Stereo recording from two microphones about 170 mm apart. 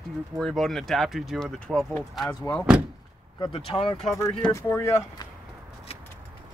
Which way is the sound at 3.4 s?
30° left (ahead or behind).